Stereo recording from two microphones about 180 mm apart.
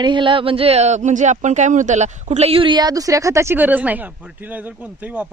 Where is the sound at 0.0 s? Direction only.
25° right (ahead or behind).